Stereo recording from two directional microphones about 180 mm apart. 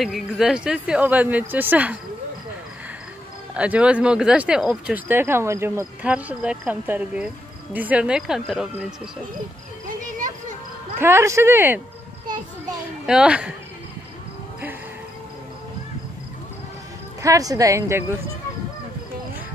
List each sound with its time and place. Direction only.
0.0 s speech: centre (ahead or behind)
3.5 s speech: 5° right (ahead or behind)
9.8 s a sound: 45° right (ahead or behind)
11.0 s speech: 15° right (ahead or behind)
13.0 s speech: 5° right (ahead or behind)
17.2 s speech: 20° right (ahead or behind)